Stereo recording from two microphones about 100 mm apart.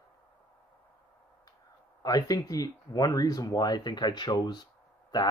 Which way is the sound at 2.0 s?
40° left (ahead or behind).